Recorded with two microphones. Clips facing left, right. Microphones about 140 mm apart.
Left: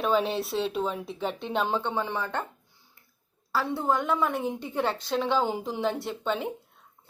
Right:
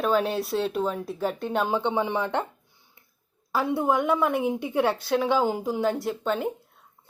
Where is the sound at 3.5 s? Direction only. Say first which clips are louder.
Right 3 dB; 15° right (ahead or behind).